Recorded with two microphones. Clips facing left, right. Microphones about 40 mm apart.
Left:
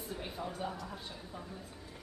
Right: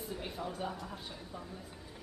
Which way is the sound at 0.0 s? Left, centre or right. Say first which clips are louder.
Right 1 dB; centre.